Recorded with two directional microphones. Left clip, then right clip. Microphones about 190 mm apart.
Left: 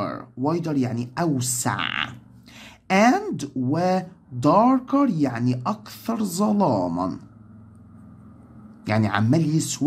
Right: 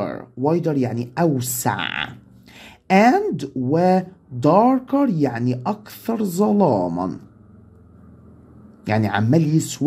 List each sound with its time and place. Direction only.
0.0 s speech: 15° right (ahead or behind)
2.6 s a sound: 15° right (ahead or behind)
3.3 s speech: 5° right (ahead or behind)
8.8 s speech: 15° right (ahead or behind)